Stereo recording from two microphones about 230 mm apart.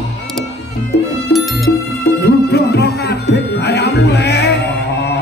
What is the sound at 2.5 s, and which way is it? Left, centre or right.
Music, left.